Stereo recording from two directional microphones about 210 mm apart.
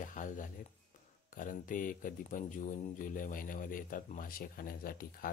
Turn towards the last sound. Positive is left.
turn(degrees=45)  # may be behind; listen again after turning